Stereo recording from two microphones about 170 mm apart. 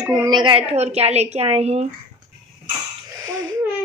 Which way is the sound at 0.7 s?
40° right (ahead or behind).